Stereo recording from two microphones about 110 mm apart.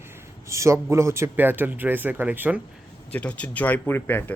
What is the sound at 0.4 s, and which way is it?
Speech, 25° right (ahead or behind).